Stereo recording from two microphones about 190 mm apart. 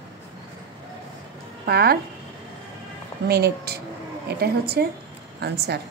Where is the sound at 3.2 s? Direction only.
55° right (ahead or behind).